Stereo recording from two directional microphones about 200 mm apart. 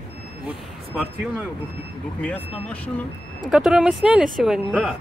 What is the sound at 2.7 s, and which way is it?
Speech, 5° left (ahead or behind).